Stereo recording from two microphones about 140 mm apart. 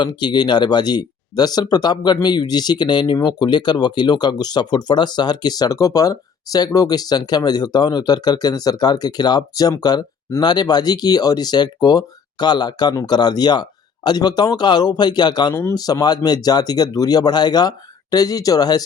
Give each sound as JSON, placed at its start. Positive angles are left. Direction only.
{"t": 0.0, "sound": "speech", "side_deg": 30}